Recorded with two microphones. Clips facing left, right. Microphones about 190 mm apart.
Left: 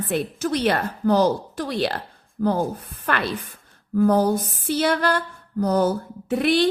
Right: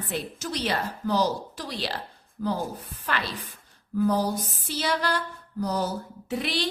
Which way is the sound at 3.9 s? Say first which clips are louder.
Left 6 dB; 55° left (ahead or behind).